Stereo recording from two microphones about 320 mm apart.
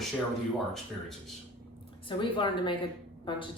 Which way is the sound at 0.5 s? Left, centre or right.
Centre.